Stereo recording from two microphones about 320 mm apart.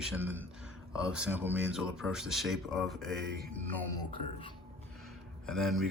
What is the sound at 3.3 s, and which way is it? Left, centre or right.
Mantra, right.